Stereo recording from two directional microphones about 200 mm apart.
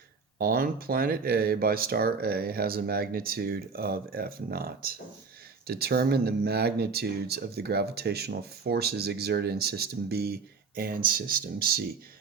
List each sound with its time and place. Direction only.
0.3 s speech: 50° right (ahead or behind)